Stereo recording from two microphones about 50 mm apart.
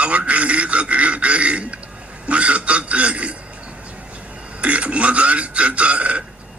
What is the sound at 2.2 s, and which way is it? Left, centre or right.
Speech, right.